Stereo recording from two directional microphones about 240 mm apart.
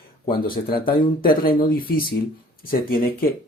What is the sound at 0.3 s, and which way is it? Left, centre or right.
Speech, left.